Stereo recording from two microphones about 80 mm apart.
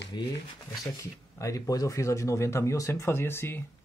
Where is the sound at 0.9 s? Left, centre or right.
Left.